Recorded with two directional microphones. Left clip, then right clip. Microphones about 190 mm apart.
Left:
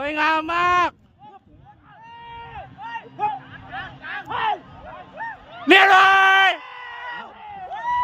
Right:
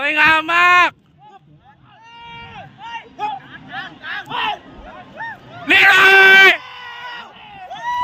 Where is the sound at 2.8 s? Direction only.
45° left (ahead or behind).